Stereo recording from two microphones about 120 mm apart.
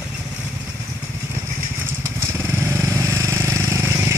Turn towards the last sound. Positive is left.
turn(degrees=-25)  # may be behind; listen again after turning